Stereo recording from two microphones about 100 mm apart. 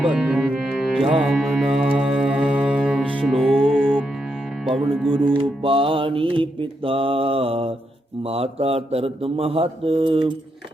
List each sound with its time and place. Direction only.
0.0 s music: 10° right (ahead or behind); by 5.4 s 5° left (ahead or behind)
5.4 s mantra: 65° right (ahead or behind)
8.2 s speech: 85° right; by 10.3 s 65° right (ahead or behind)